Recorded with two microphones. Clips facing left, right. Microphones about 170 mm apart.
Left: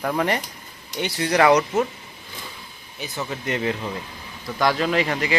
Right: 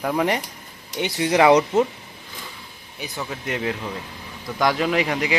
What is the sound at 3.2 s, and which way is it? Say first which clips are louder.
Speech: left 2 dB; 5° right (ahead or behind).